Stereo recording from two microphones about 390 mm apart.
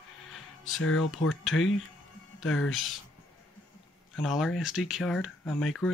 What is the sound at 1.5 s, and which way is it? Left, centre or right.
Speech, left.